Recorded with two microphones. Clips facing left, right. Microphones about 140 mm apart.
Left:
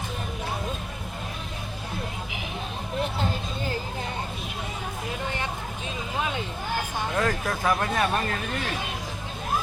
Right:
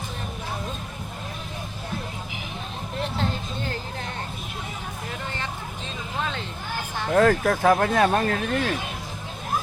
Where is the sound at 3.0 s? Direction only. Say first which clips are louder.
Even; 5° left (ahead or behind).